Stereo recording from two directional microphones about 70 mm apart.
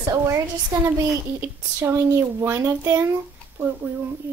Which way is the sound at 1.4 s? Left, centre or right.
Right.